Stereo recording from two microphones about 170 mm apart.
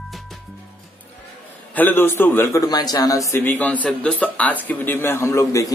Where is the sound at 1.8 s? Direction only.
10° left (ahead or behind).